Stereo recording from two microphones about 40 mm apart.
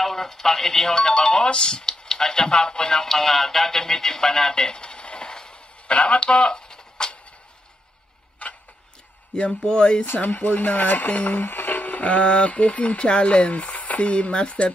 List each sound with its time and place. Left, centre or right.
0.0 s speech: centre
8.4 s tick-tock: left
9.5 s speech: left
10.1 s speech: left
11.1 s speech: left
11.3 s a sound: left
12.0 s speech: left